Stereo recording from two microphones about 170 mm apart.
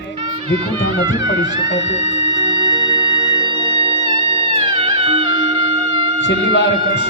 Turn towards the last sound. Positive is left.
turn(degrees=90)